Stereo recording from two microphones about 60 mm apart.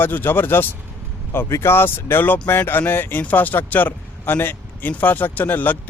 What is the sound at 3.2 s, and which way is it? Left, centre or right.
Speech, left.